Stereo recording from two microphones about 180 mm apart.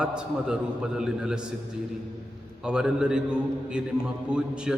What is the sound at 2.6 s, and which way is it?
Speech, 5° right (ahead or behind).